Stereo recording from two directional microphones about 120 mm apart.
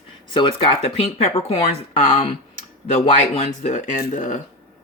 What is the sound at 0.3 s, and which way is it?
Speech, 45° left (ahead or behind).